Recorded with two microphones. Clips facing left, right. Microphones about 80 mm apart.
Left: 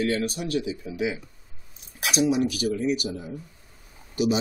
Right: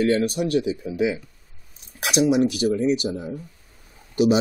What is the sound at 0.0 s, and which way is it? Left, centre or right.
Speech, right.